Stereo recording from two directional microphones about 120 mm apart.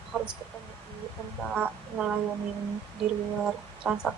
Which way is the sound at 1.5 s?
10° right (ahead or behind).